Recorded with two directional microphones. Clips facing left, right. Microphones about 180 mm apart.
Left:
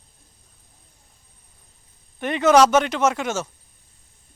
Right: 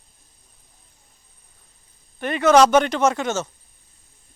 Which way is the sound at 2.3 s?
20° left (ahead or behind).